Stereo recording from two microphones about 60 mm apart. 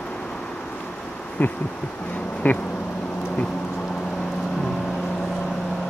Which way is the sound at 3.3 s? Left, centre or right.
Centre.